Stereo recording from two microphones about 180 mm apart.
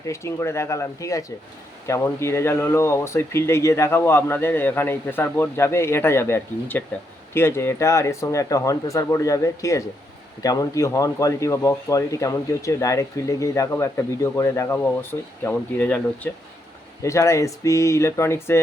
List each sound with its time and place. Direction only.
0.0 s speech: 15° left (ahead or behind)